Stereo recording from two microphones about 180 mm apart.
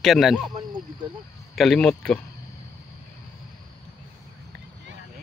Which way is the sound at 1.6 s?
5° left (ahead or behind).